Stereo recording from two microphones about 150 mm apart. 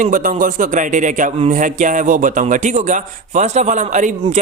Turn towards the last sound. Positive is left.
turn(degrees=-55)  # may be behind; listen again after turning